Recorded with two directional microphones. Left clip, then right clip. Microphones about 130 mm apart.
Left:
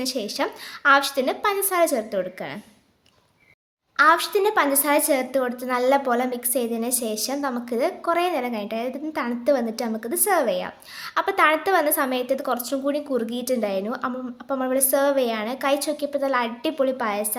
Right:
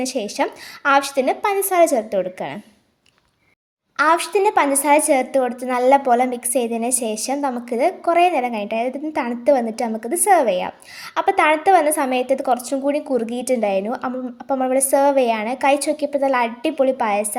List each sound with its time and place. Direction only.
0.0 s a woman's voice: 30° right (ahead or behind)
3.9 s a woman's voice: 30° right (ahead or behind)